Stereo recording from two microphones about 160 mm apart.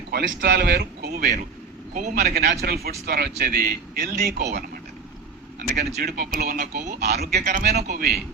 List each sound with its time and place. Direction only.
0.1 s speech: 75° right (ahead or behind)
1.9 s a man's voice: 50° right (ahead or behind)
2.2 s a man's voice: 75° right (ahead or behind)
5.5 s a man's voice: 75° right (ahead or behind)